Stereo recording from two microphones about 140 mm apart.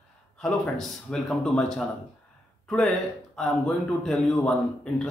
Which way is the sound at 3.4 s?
Centre (ahead or behind).